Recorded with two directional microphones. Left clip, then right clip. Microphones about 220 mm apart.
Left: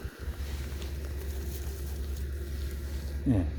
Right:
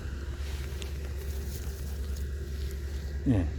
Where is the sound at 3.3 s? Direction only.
Centre (ahead or behind).